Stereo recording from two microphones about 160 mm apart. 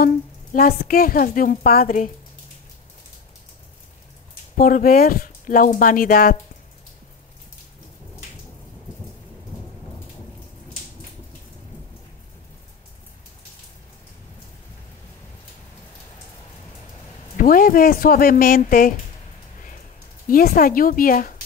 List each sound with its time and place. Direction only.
0.0 s a woman's voice: 65° left (ahead or behind)
4.6 s a woman's voice: 60° left (ahead or behind)
17.4 s a woman's voice: 60° left (ahead or behind)
20.2 s a woman's voice: 60° left (ahead or behind)